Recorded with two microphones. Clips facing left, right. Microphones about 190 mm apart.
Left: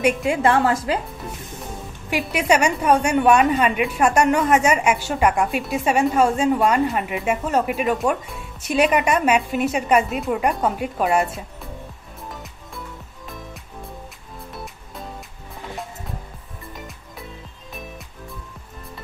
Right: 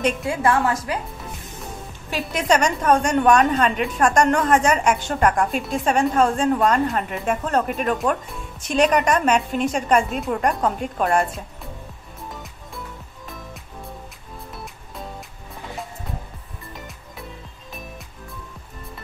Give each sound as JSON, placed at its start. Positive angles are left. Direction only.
{"t": 0.2, "sound": "a woman's voice", "side_deg": 20}
{"t": 2.0, "sound": "a woman's voice", "side_deg": 10}
{"t": 14.5, "sound": "music", "side_deg": 0}